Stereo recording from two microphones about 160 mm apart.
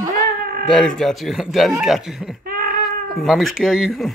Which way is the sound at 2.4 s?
65° right (ahead or behind).